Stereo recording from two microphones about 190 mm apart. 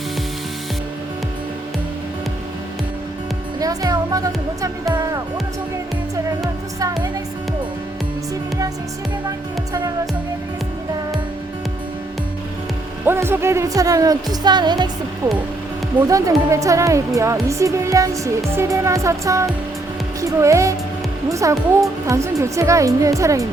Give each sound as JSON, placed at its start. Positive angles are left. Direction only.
{"t": 3.6, "sound": "music", "side_deg": -20}
{"t": 13.1, "sound": "speech", "side_deg": -10}
{"t": 16.0, "sound": "speech", "side_deg": -15}